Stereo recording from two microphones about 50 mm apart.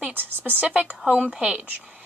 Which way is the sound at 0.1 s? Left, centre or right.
Right.